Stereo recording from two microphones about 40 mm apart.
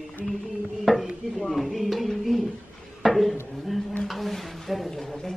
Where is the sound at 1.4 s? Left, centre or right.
Centre.